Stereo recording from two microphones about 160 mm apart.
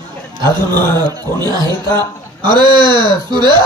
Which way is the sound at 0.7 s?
15° left (ahead or behind).